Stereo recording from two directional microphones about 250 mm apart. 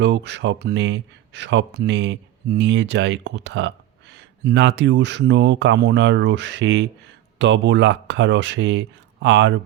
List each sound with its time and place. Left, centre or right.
0.0 s speech: right